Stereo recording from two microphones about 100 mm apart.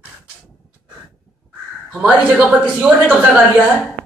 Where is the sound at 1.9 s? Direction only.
10° right (ahead or behind).